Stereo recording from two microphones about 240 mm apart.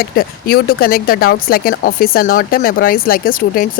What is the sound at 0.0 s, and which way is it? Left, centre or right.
Speech, left.